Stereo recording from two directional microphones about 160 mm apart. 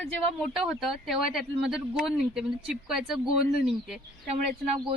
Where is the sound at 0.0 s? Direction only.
Centre (ahead or behind).